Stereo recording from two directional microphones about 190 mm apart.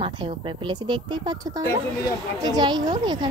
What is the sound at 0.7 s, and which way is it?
A woman's voice, 25° right (ahead or behind).